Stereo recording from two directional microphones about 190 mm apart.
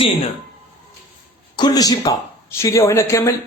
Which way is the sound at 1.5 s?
20° left (ahead or behind).